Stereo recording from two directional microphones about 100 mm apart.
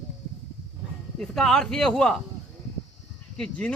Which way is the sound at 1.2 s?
5° left (ahead or behind).